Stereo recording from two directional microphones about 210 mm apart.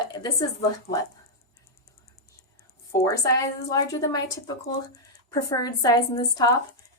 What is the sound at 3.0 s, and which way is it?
Speech, 15° left (ahead or behind).